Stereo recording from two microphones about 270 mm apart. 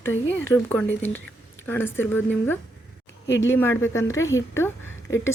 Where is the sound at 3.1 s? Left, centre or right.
Left.